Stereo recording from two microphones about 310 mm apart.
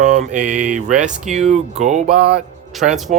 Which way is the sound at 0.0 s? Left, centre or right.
Right.